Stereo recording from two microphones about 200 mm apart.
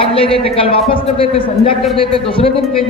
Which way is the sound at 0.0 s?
30° left (ahead or behind).